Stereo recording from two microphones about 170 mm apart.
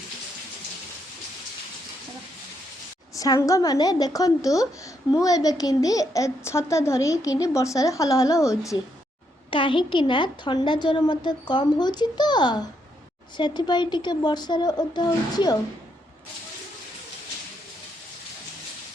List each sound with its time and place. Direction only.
3.2 s a child's voice: 20° left (ahead or behind)
9.5 s a child's voice: 30° left (ahead or behind)